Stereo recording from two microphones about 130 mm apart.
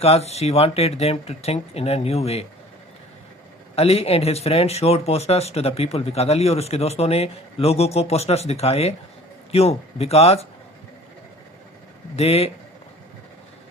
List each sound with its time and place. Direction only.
0.0 s speech: 50° left (ahead or behind)
3.8 s speech: 50° left (ahead or behind)
12.1 s speech: 50° left (ahead or behind)